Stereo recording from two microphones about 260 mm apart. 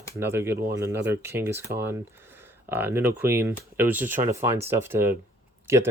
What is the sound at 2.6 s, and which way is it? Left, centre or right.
Speech, centre.